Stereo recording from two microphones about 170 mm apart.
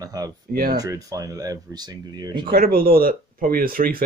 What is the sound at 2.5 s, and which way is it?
Speech, 65° right (ahead or behind).